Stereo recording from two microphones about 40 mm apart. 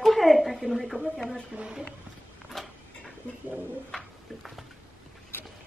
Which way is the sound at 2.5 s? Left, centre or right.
Centre.